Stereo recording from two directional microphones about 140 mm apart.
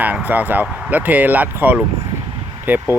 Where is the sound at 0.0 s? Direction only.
10° right (ahead or behind).